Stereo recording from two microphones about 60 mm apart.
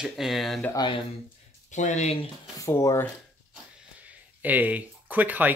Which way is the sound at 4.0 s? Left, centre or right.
Right.